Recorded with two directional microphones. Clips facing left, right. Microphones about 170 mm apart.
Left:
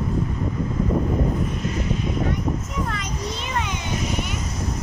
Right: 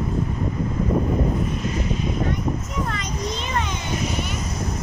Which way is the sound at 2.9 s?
5° left (ahead or behind).